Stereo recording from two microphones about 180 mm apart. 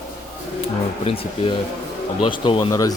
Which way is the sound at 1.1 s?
30° left (ahead or behind).